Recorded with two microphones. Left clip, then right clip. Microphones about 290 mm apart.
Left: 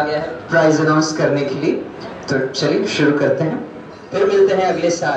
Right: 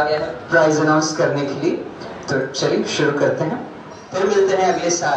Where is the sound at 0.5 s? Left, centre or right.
Right.